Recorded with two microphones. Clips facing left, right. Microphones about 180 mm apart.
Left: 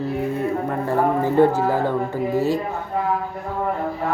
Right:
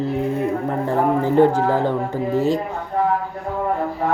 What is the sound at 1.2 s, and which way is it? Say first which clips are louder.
Speech: right 2 dB; 15° right (ahead or behind).